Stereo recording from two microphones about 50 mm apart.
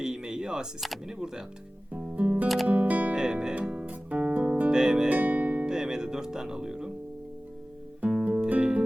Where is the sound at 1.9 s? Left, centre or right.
Right.